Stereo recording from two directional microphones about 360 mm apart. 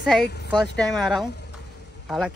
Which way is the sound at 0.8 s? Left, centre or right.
Centre.